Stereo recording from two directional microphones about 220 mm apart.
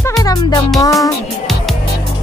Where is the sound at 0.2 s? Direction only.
15° left (ahead or behind).